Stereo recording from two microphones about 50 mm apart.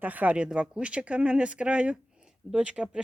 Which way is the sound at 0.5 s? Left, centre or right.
Right.